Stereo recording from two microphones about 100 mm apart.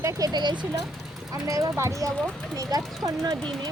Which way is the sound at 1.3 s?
35° right (ahead or behind).